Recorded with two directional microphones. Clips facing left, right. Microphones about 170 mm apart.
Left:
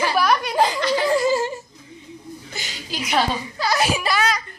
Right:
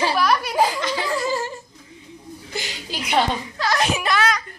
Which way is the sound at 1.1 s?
20° left (ahead or behind).